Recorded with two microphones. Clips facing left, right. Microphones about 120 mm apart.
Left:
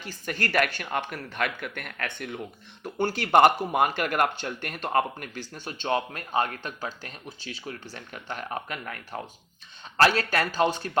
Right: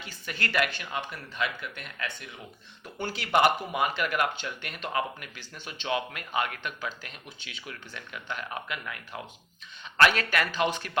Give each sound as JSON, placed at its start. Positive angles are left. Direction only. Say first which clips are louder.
{"t": 0.0, "sound": "speech", "louder": "left 4 dB", "side_deg": 45}